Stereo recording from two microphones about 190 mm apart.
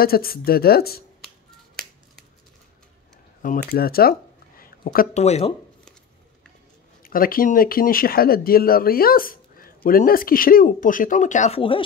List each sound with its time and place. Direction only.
0.0 s speech: 50° left (ahead or behind)
3.4 s speech: 50° left (ahead or behind)
7.0 s speech: 50° left (ahead or behind); by 11.8 s 30° left (ahead or behind)